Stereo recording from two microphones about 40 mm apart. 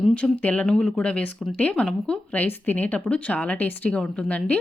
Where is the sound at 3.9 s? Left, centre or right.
Left.